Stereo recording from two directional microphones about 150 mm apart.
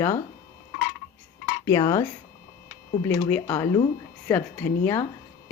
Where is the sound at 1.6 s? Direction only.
20° left (ahead or behind).